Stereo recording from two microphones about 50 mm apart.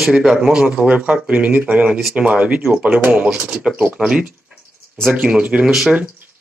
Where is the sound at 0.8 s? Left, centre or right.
Right.